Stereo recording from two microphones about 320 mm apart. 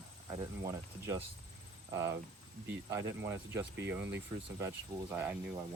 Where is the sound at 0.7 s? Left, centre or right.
Centre.